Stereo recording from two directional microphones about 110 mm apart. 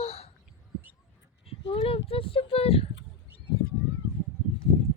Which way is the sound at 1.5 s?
60° left (ahead or behind).